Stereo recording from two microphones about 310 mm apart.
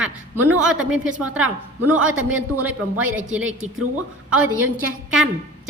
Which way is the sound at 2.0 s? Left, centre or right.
Right.